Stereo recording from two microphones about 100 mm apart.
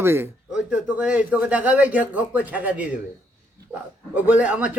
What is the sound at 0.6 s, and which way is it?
A man's voice, 15° right (ahead or behind).